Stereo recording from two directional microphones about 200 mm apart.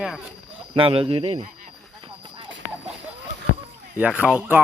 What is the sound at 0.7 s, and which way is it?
Speech, 25° right (ahead or behind).